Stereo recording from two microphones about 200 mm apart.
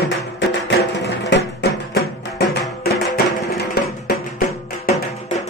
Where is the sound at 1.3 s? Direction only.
65° left (ahead or behind).